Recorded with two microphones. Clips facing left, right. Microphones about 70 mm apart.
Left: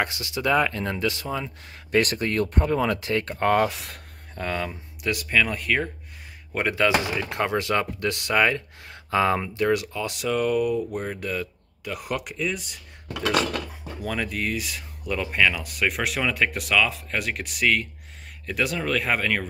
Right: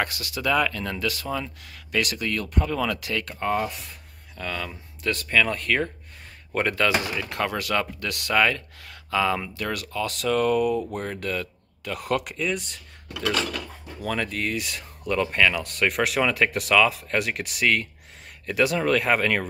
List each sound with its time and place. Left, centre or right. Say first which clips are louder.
0.0 s speech: left 1 dB; left
1.6 s speech: left 4 dB; left
3.4 s speech: left 5 dB; left
4.4 s speech: left 3 dB; left
4.6 s speech: even; centre
13.1 s speech: left 2 dB; left
13.7 s speech: right 1 dB; centre